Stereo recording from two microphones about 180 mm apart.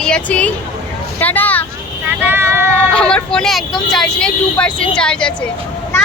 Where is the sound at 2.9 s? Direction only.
5° left (ahead or behind).